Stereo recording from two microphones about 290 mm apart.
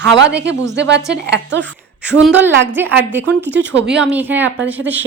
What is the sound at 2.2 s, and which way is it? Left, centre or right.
A woman's voice, centre.